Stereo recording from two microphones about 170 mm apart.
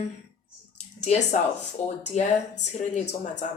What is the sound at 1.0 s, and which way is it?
A woman's voice, 45° left (ahead or behind).